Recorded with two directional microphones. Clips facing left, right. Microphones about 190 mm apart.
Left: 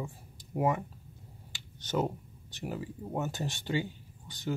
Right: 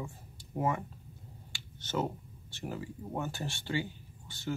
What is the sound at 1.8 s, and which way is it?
Speech, 15° left (ahead or behind).